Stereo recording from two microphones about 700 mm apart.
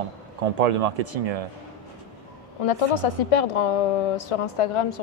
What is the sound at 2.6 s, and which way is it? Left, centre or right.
A woman's voice, left.